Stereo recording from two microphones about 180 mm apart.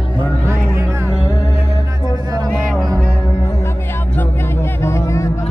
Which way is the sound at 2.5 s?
Centre (ahead or behind).